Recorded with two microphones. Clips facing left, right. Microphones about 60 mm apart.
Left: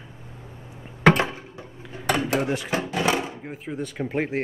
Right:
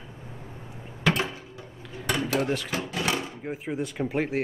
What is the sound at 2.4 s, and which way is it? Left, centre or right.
Speech, centre.